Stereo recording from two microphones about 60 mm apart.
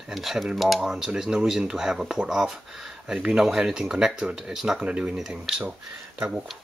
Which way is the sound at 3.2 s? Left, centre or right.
Centre.